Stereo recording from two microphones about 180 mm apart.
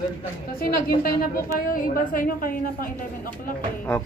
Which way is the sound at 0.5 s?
55° left (ahead or behind).